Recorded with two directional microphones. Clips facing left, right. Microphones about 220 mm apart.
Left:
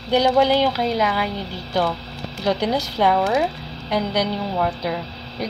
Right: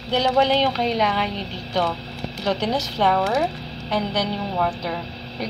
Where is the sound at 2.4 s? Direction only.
10° left (ahead or behind).